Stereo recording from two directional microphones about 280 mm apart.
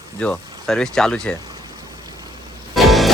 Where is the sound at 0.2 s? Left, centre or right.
Centre.